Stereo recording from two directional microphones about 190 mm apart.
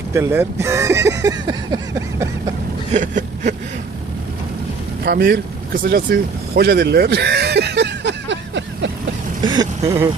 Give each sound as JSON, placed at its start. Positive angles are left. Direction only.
{"t": 0.1, "sound": "speech", "side_deg": -15}
{"t": 2.9, "sound": "a sound", "side_deg": -40}
{"t": 5.0, "sound": "vehicle", "side_deg": -55}
{"t": 9.4, "sound": "speech", "side_deg": -25}